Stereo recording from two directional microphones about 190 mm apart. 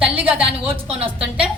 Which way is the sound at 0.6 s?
30° right (ahead or behind).